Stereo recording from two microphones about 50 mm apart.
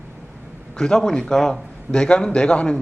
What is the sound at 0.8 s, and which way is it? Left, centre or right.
Speech, centre.